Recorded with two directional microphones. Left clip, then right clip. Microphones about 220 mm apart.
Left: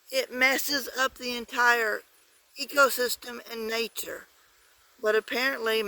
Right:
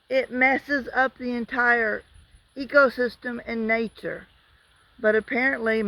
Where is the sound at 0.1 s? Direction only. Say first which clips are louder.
Right 4 dB; 25° left (ahead or behind).